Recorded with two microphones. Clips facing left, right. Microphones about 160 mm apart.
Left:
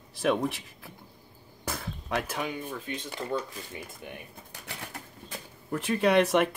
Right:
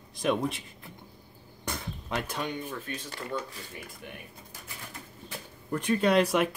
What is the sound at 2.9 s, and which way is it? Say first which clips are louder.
Speech: left 3 dB; 20° left (ahead or behind).